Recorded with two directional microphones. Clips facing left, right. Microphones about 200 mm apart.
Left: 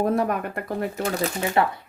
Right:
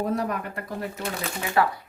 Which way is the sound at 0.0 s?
55° left (ahead or behind).